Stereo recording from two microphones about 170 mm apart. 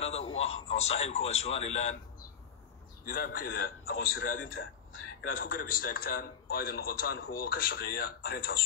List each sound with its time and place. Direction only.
0.0 s speech: 40° left (ahead or behind)
3.1 s a man's voice: 60° left (ahead or behind)